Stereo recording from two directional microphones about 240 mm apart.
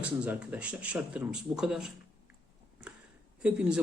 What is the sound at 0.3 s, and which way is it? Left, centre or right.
Speech, centre.